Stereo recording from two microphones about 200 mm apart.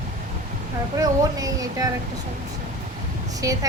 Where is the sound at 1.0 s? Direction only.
15° right (ahead or behind).